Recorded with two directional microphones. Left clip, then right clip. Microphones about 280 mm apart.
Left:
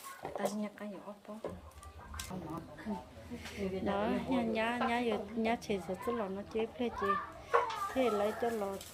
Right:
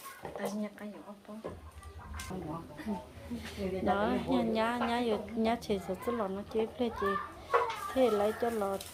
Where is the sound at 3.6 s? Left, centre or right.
Centre.